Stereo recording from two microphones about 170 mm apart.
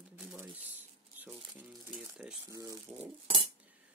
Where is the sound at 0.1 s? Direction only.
5° right (ahead or behind).